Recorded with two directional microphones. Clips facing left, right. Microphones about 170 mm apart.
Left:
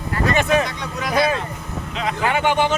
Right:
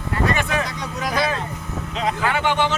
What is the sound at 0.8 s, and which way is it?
Speech, 40° right (ahead or behind).